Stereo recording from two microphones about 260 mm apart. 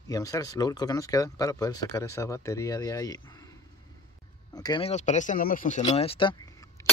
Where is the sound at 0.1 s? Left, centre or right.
Centre.